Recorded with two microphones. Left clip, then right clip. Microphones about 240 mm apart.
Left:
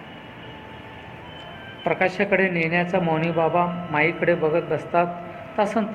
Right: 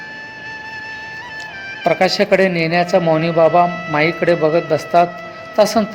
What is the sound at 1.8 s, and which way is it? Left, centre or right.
Speech, right.